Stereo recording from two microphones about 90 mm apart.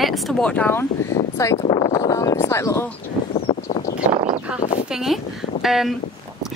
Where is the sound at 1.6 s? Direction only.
50° left (ahead or behind).